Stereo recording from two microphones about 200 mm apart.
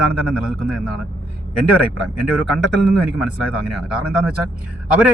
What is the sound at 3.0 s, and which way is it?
A man's voice, 5° right (ahead or behind).